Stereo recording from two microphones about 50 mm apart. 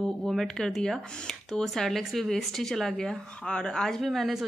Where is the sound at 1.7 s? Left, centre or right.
Centre.